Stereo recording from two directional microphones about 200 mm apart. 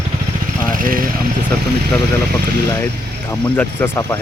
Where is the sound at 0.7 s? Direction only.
45° right (ahead or behind).